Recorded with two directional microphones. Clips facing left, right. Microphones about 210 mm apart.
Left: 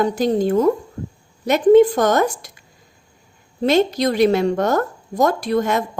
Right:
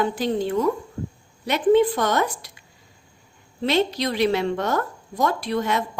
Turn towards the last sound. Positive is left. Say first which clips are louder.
# left 5 dB
turn(degrees=45)  # may be behind; listen again after turning